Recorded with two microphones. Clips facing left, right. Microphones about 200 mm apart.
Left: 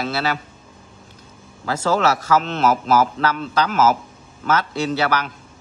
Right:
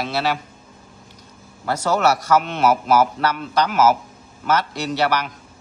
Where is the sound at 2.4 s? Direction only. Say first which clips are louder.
Even; 10° right (ahead or behind).